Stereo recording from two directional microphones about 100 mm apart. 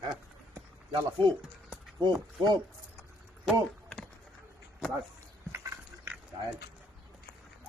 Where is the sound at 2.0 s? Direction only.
50° right (ahead or behind).